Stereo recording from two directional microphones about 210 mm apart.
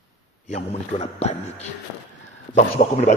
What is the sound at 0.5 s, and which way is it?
A man's voice, 30° left (ahead or behind).